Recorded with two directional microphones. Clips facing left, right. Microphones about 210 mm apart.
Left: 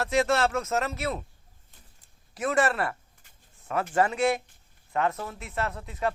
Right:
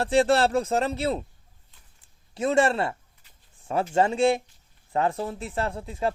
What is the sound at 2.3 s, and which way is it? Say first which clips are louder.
Speech: right 4 dB; 25° right (ahead or behind).